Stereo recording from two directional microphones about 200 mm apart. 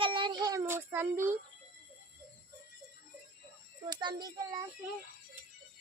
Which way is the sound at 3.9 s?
20° right (ahead or behind).